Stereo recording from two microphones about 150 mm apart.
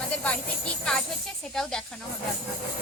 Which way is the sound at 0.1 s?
5° left (ahead or behind).